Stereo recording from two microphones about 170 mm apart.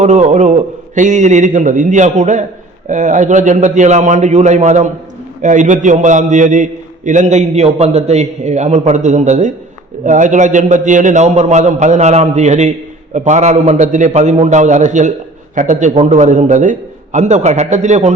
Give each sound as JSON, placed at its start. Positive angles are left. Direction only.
{"t": 0.0, "sound": "a man's voice", "side_deg": -45}